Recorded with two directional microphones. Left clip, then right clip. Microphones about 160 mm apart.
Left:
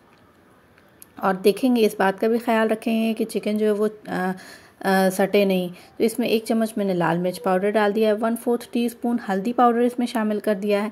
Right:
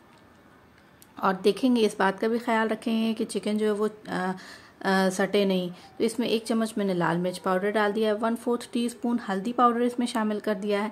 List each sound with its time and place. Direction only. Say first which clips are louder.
1.1 s speech: left 4 dB; 15° left (ahead or behind)